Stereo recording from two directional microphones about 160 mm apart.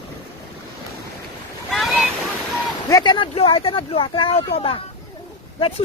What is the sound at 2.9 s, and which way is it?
Speech, 25° left (ahead or behind).